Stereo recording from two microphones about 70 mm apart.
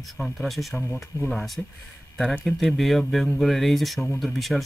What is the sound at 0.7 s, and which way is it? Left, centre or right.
Speech, left.